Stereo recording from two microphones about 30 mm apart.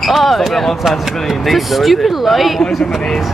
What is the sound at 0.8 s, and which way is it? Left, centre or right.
Speech, centre.